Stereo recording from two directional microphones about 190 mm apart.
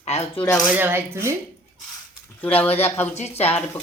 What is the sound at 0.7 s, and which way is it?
Speech, 10° right (ahead or behind).